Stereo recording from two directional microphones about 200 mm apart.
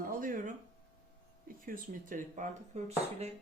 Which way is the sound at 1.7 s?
40° right (ahead or behind).